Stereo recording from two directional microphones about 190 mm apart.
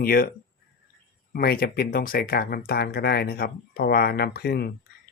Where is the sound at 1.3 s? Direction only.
50° left (ahead or behind).